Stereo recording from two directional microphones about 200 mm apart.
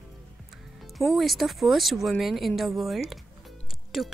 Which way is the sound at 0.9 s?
Centre (ahead or behind).